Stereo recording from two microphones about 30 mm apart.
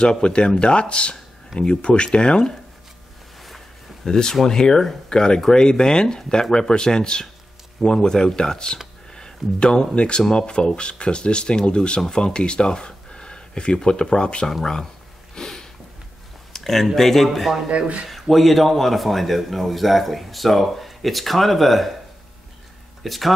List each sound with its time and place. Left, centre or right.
0.0 s speech: left
4.0 s speech: centre
15.3 s a sound: centre
16.5 s a sound: centre
16.9 s speech: centre
17.6 s a man's voice: right
18.3 s a man's voice: centre
23.0 s a man's voice: centre